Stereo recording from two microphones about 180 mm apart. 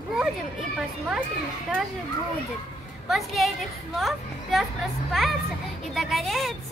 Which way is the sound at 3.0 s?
Centre (ahead or behind).